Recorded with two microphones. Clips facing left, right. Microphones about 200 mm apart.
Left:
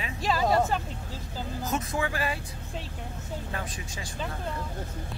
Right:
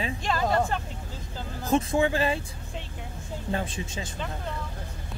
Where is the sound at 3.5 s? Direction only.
25° right (ahead or behind).